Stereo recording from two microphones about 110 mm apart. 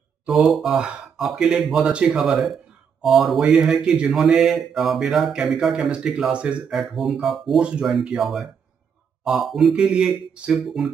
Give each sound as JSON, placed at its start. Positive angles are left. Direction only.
{"t": 0.3, "sound": "speech", "side_deg": 0}